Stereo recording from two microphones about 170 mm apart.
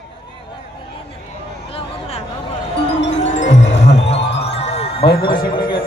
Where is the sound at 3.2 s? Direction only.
45° left (ahead or behind).